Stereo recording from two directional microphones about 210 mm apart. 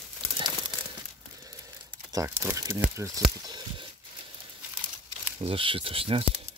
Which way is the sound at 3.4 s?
20° right (ahead or behind).